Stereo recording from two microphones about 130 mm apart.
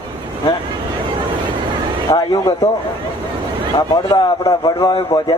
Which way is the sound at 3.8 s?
25° left (ahead or behind).